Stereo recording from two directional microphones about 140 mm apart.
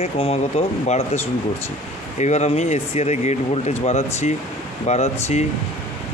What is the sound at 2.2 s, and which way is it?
Speech, 55° left (ahead or behind).